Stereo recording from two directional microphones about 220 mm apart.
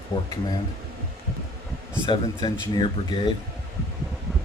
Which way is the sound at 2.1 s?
20° left (ahead or behind).